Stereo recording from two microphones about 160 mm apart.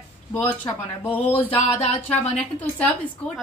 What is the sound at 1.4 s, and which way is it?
Speech, 35° left (ahead or behind).